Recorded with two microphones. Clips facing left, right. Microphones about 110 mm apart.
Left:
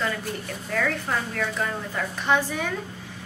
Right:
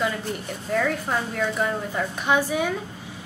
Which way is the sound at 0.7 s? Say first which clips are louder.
Right 3 dB; 15° right (ahead or behind).